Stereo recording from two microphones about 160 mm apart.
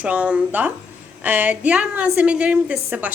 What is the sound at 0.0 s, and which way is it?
A woman's voice, 10° right (ahead or behind).